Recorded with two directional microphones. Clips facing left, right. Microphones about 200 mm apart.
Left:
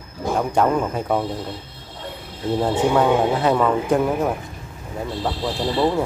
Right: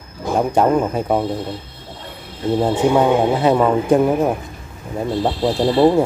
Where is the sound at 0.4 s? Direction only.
20° right (ahead or behind).